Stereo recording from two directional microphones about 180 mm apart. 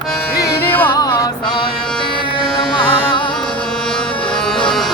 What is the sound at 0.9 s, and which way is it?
Music, 20° left (ahead or behind).